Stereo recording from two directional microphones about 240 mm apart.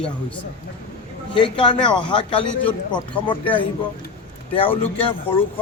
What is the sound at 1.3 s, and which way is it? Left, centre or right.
A man's voice, centre.